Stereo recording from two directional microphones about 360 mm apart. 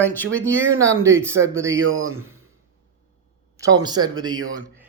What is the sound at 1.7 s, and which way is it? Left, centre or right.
Speech, right.